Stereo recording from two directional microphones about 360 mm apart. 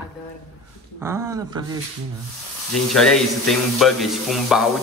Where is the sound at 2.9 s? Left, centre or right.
Centre.